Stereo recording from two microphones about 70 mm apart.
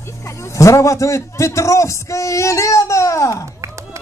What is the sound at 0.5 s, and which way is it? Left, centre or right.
Speech, left.